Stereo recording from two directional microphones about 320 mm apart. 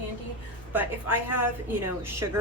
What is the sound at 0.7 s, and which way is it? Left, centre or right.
Speech, centre.